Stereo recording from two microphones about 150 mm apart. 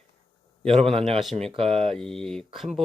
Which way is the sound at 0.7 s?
45° right (ahead or behind).